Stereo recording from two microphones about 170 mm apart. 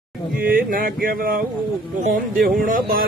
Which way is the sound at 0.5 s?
55° right (ahead or behind).